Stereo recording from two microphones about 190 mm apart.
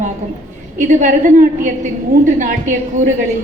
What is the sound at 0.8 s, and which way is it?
A woman's voice, 40° right (ahead or behind).